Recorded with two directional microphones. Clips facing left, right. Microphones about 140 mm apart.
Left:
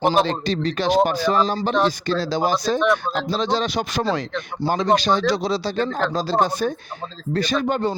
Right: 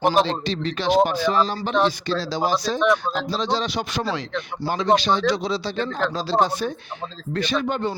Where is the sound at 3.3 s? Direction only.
50° left (ahead or behind).